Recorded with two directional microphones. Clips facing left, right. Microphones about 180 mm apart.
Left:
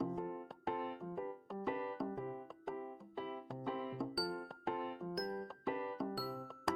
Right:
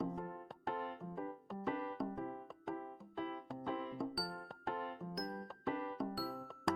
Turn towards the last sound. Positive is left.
turn(degrees=0)  # may be behind; listen again after turning